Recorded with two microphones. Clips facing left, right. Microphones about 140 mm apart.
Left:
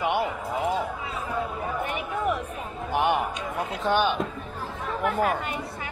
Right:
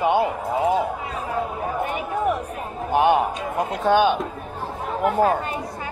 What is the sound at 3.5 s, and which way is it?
Speech, 40° right (ahead or behind).